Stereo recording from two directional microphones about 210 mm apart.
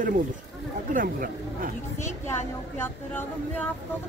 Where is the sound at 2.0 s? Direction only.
10° left (ahead or behind).